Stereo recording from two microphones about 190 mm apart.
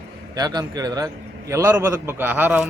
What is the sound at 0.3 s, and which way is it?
Speech, 20° right (ahead or behind).